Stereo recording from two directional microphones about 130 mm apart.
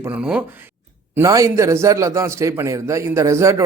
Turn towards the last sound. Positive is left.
turn(degrees=-20)  # may be behind; listen again after turning